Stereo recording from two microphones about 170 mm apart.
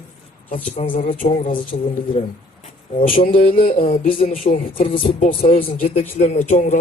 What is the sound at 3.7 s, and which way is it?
Speech, 40° left (ahead or behind).